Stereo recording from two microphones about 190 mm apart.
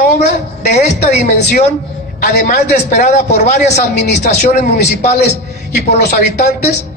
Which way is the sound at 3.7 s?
60° left (ahead or behind).